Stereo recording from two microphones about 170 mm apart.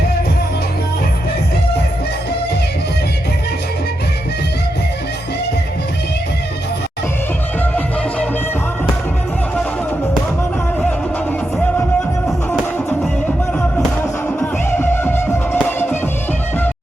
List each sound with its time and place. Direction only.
12.5 s music: 10° left (ahead or behind)
14.3 s music: 10° left (ahead or behind)